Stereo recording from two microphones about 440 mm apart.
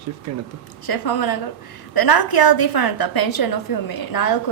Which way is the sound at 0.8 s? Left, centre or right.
Left.